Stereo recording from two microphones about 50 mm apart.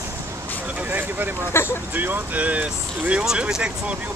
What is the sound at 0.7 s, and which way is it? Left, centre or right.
Vehicle, right.